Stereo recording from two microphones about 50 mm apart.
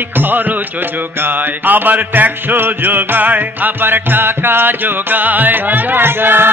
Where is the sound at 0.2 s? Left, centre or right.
Right.